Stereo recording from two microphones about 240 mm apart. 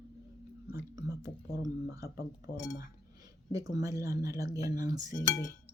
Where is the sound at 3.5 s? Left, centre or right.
Centre.